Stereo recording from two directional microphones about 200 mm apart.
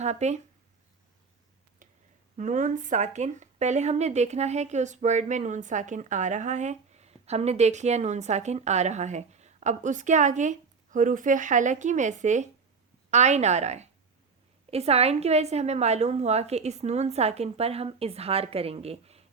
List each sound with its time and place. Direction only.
0.0 s speech: 35° right (ahead or behind)
2.3 s speech: 40° right (ahead or behind)